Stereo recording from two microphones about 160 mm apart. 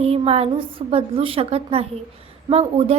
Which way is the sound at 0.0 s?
40° right (ahead or behind).